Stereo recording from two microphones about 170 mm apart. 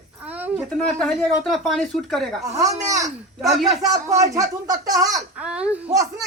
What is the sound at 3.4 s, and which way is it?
Speech, centre (ahead or behind).